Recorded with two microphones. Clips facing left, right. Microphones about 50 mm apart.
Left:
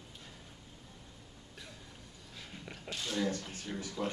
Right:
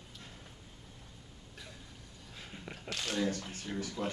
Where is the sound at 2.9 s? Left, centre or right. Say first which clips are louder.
Right 2 dB; right.